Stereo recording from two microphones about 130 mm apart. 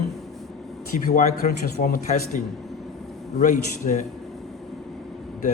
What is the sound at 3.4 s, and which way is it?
Speech, 65° left (ahead or behind).